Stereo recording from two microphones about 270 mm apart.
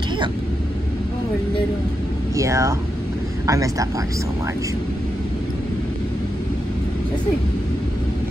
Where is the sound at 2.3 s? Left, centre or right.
Centre.